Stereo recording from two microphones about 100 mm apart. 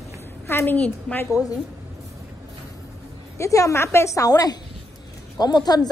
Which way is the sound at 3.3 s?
30° left (ahead or behind).